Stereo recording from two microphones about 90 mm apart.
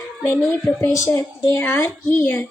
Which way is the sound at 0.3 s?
25° left (ahead or behind).